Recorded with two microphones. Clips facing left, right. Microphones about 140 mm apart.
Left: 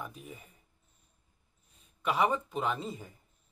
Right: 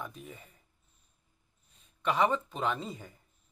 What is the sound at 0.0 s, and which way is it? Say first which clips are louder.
Speech: right 1 dB; 5° left (ahead or behind).